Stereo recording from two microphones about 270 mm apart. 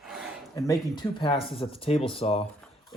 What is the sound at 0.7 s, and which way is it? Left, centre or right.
Speech, centre.